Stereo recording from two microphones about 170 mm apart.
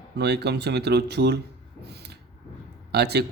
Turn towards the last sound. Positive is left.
turn(degrees=-75)  # may be behind; listen again after turning